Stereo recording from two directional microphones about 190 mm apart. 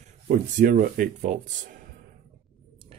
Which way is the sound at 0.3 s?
40° right (ahead or behind).